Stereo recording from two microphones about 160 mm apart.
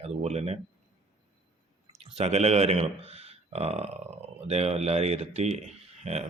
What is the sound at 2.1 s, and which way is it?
Speech, 40° right (ahead or behind).